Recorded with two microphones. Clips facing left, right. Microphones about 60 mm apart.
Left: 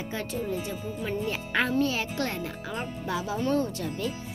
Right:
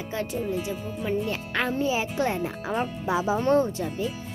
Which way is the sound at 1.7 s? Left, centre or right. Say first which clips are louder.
Right 1 dB; centre.